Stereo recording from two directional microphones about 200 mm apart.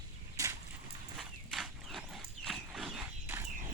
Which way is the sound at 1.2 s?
Centre (ahead or behind).